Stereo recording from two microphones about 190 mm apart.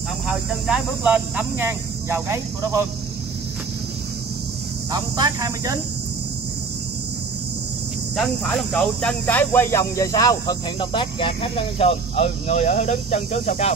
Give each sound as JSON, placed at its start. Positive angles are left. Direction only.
{"t": 0.3, "sound": "speech", "side_deg": -5}
{"t": 4.9, "sound": "speech", "side_deg": -20}
{"t": 8.2, "sound": "speech", "side_deg": 0}